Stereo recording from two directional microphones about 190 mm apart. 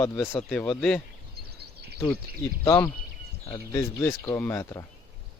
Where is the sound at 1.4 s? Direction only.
55° right (ahead or behind).